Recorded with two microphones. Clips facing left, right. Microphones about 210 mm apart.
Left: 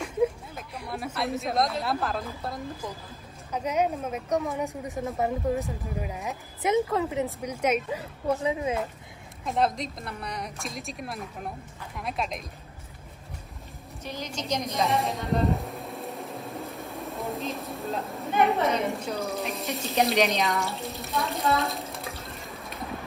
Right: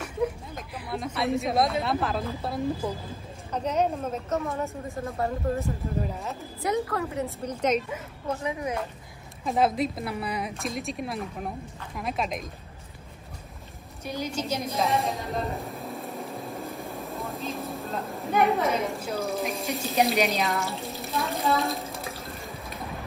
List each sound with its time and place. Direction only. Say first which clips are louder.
0.6 s a woman's voice: right 1 dB; centre (ahead or behind)
8.5 s speech: left 1 dB; 25° left (ahead or behind)
9.4 s a woman's voice: right 3 dB; centre (ahead or behind)
14.0 s a sound: right 3 dB; 10° right (ahead or behind)
19.5 s speech: right 1 dB; centre (ahead or behind)